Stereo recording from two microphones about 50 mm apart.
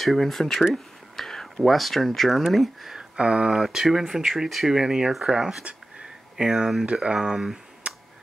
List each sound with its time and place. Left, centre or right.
0.0 s speech: centre
3.0 s speech: right
3.5 s speech: centre
5.6 s a sound: right
6.3 s speech: centre
7.8 s finger snapping: right